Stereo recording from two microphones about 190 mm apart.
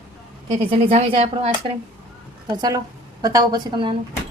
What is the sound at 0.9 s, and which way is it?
A woman's voice, 30° right (ahead or behind).